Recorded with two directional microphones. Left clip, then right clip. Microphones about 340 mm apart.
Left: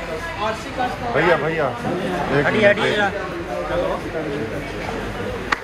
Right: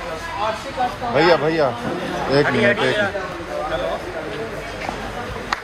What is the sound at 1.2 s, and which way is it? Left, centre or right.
Speech, right.